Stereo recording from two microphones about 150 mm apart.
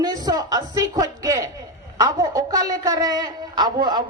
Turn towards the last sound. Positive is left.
turn(degrees=-30)  # may be behind; listen again after turning